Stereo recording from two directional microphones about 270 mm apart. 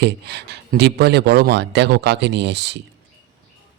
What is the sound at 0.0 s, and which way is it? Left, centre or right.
Speech, right.